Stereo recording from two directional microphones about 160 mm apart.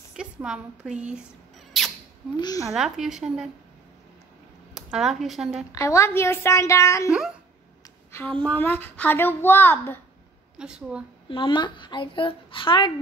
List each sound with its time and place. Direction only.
0.1 s a woman's voice: 5° right (ahead or behind)
1.7 s rodents: centre (ahead or behind)
2.3 s a woman's voice: 25° left (ahead or behind)
2.7 s a woman's voice: centre (ahead or behind)
4.7 s speech: centre (ahead or behind)
5.7 s a woman's voice: 20° left (ahead or behind)
8.1 s a woman's voice: 10° left (ahead or behind)
10.6 s a woman's voice: 5° right (ahead or behind)
11.2 s a woman's voice: 30° left (ahead or behind)